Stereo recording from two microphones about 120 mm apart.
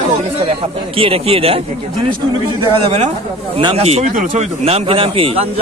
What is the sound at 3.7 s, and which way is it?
Speech, 60° right (ahead or behind).